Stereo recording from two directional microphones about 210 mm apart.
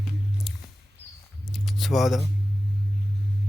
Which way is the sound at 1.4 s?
Centre (ahead or behind).